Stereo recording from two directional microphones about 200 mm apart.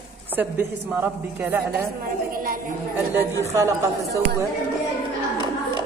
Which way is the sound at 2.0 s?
45° right (ahead or behind).